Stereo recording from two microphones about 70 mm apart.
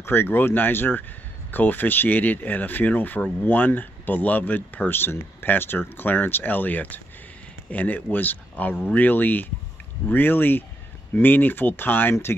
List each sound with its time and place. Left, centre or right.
0.0 s speech: left